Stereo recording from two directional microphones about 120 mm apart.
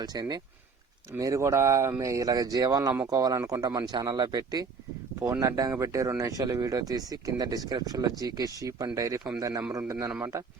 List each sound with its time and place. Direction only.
0.0 s speech: 35° right (ahead or behind)